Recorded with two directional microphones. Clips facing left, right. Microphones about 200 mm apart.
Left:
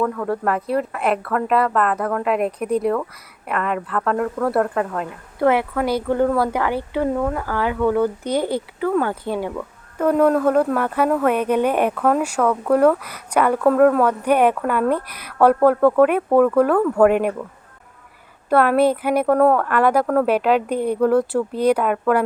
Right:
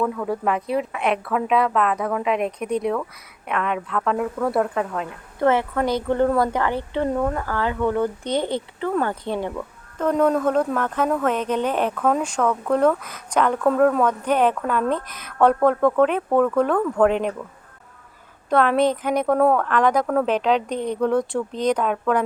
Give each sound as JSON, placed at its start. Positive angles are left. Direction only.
{"t": 0.0, "sound": "a woman's voice", "side_deg": -5}
{"t": 18.4, "sound": "speech", "side_deg": 5}